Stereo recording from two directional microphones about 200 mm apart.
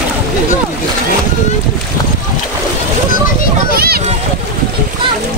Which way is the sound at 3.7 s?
50° right (ahead or behind).